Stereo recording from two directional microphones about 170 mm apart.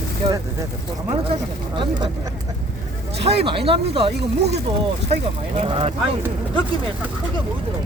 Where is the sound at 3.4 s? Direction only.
35° right (ahead or behind).